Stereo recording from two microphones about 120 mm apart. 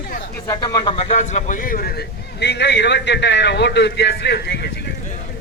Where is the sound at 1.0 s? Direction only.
75° left (ahead or behind).